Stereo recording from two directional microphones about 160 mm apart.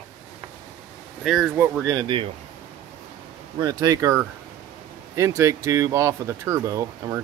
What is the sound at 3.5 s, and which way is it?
Speech, 25° right (ahead or behind).